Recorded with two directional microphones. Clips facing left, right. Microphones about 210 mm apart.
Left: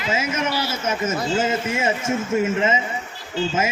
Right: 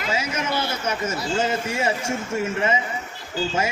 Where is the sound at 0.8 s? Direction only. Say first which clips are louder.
Left 3 dB; 20° left (ahead or behind).